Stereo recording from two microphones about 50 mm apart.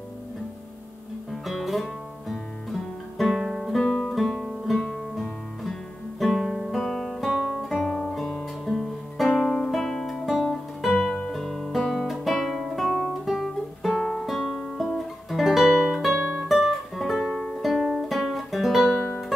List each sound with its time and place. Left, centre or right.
1.3 s guitar: centre
3.8 s music: centre
4.1 s guitar: centre
7.2 s guitar: centre
7.6 s guitar: centre
8.7 s music: centre
11.2 s guitar: centre
15.8 s music: centre